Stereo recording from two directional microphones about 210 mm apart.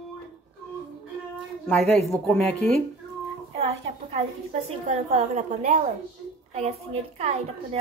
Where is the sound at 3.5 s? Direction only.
30° right (ahead or behind).